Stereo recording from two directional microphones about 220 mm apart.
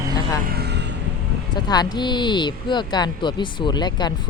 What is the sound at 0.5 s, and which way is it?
Vehicle, 50° right (ahead or behind).